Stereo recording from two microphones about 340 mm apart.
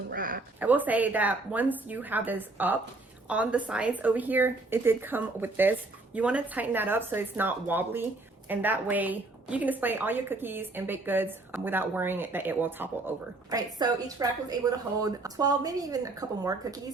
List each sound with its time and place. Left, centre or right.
0.1 s a woman's voice: right
0.6 s a woman's voice: centre